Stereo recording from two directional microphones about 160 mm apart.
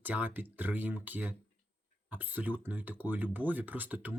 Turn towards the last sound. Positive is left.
turn(degrees=-10)  # may be behind; listen again after turning